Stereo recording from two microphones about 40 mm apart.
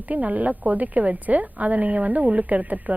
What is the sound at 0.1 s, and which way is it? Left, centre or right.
A woman's voice, right.